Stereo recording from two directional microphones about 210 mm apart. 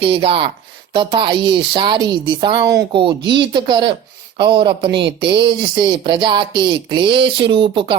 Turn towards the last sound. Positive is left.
turn(degrees=-25)  # may be behind; listen again after turning